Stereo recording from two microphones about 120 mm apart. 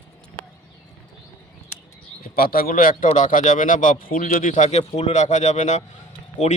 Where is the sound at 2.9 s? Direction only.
90° left.